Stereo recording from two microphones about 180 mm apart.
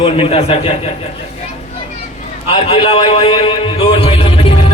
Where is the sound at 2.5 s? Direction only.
30° left (ahead or behind).